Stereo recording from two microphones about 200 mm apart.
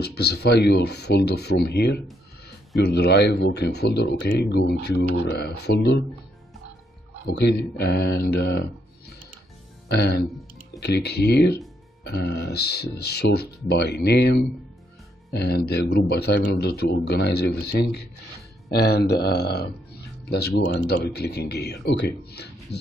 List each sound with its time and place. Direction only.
0.0 s speech: 55° left (ahead or behind)
7.2 s speech: 55° left (ahead or behind)